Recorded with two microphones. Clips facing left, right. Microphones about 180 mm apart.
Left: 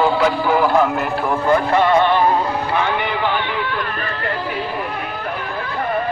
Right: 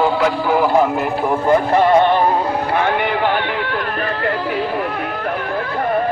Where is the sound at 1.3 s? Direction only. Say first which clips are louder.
Right 2 dB; 35° right (ahead or behind).